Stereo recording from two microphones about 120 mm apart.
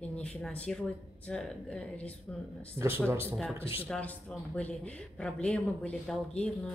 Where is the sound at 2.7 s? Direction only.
20° right (ahead or behind).